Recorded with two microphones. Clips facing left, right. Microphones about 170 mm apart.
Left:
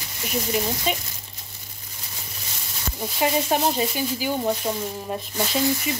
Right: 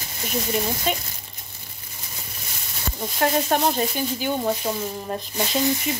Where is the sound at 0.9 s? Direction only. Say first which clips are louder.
Right 1 dB; centre (ahead or behind).